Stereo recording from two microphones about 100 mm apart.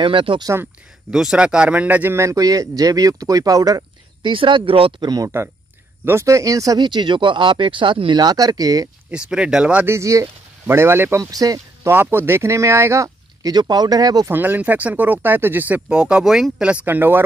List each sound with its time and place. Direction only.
0.0 s speech: 60° right (ahead or behind)
1.1 s a man's voice: 5° right (ahead or behind); by 3.8 s 35° right (ahead or behind)
4.2 s speech: 60° right (ahead or behind)
5.0 s a man's voice: 40° right (ahead or behind)
6.0 s a man's voice: 30° right (ahead or behind)
6.8 s speech: 50° right (ahead or behind)
9.1 s speech: 10° right (ahead or behind)
9.8 s speech: 30° right (ahead or behind)
11.2 s speech: 35° right (ahead or behind)
11.9 s a man's voice: 20° right (ahead or behind); by 14.3 s 40° right (ahead or behind)
14.3 s speech: 20° right (ahead or behind)